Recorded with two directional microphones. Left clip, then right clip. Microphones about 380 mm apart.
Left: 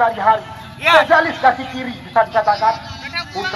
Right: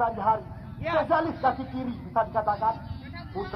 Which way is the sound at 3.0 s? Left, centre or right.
Right.